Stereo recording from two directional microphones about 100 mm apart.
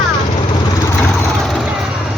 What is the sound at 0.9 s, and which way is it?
Vehicle, 20° left (ahead or behind).